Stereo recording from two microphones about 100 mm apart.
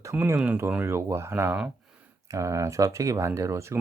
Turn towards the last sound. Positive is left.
turn(degrees=-30)  # may be behind; listen again after turning